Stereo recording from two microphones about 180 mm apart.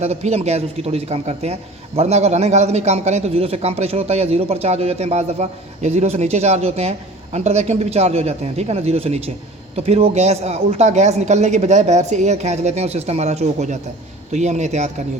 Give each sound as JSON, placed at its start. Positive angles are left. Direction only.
{"t": 0.0, "sound": "a man's voice", "side_deg": -40}